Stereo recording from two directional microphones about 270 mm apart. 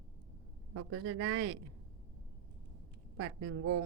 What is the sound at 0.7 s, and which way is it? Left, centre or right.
Speech, right.